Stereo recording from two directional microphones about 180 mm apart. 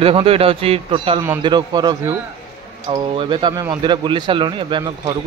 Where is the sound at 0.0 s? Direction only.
30° right (ahead or behind).